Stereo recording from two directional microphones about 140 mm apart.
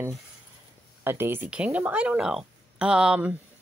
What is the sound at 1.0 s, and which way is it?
Speech, 15° right (ahead or behind).